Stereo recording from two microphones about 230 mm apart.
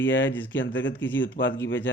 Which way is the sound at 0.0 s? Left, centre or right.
Left.